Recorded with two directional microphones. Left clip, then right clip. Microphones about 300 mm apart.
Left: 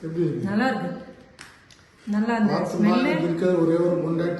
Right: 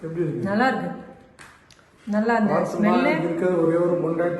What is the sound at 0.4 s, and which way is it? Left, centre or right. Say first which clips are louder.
A man's voice: right 3 dB; centre.